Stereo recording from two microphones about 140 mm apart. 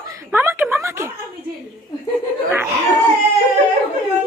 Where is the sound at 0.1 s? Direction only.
20° right (ahead or behind).